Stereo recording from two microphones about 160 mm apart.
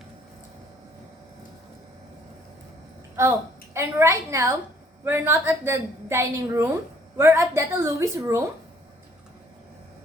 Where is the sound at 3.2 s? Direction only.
15° right (ahead or behind).